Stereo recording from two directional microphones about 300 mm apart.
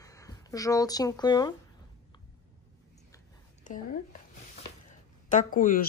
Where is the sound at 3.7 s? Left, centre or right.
Left.